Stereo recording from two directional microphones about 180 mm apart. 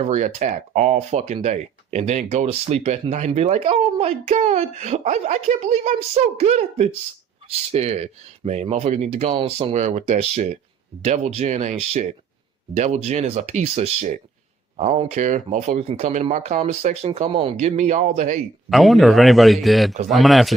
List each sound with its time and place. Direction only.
0.0 s speech: 40° right (ahead or behind)
18.7 s speech: centre (ahead or behind)